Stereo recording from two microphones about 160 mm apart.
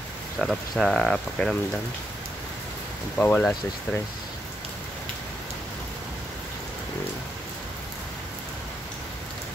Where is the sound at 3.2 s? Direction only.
5° left (ahead or behind).